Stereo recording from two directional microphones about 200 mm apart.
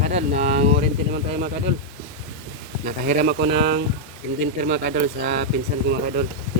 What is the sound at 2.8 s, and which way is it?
Speech, 50° right (ahead or behind).